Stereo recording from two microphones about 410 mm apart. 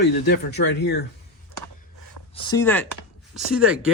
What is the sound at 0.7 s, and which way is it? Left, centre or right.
Speech, left.